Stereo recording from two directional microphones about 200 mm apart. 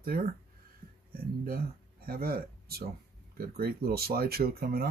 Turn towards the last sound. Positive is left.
turn(degrees=-50)  # may be behind; listen again after turning